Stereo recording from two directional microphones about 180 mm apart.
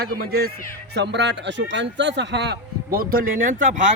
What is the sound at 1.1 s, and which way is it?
Speech, 75° right (ahead or behind).